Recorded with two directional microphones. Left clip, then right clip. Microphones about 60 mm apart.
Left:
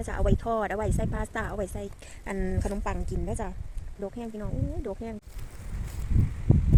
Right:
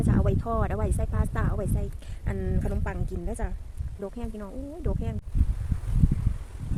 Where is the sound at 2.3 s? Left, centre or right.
Left.